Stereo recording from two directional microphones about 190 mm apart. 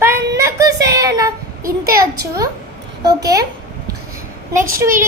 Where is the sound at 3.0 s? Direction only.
20° right (ahead or behind).